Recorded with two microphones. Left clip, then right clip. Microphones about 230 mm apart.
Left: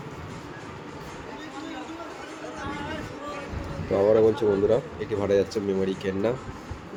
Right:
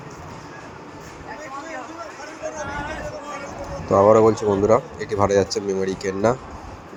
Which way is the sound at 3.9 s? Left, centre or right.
Right.